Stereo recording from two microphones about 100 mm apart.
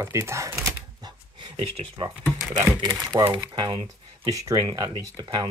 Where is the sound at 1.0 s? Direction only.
45° right (ahead or behind).